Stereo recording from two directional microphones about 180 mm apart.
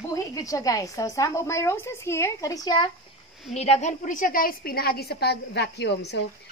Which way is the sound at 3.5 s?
35° left (ahead or behind).